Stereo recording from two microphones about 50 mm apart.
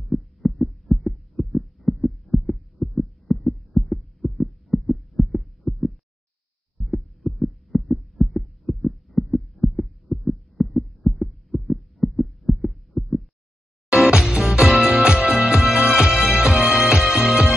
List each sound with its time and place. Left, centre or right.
0.0 s heart sounds: centre
13.8 s music: centre